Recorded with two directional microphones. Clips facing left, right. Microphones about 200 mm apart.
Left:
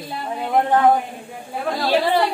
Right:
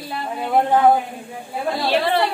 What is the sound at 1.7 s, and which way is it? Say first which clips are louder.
Speech: left 1 dB; 10° left (ahead or behind).